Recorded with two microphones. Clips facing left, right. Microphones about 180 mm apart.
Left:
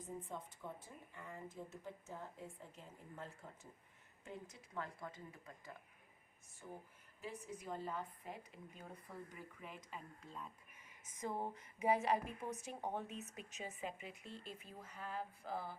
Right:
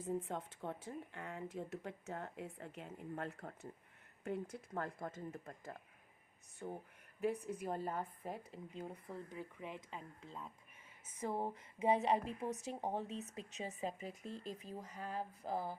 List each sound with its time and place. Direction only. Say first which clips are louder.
0.0 s speech: right 7 dB; 75° right (ahead or behind)
4.5 s speech: right 5 dB; 45° right (ahead or behind)
7.4 s a woman's voice: right 5 dB; 55° right (ahead or behind)
8.4 s speech: right 7 dB; 25° right (ahead or behind); by 15.8 s 45° right (ahead or behind)